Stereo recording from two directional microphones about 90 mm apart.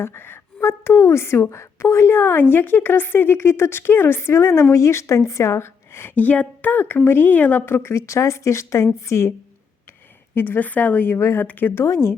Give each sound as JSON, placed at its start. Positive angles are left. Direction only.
{"t": 0.0, "sound": "a woman's voice", "side_deg": 25}
{"t": 10.3, "sound": "a woman's voice", "side_deg": 20}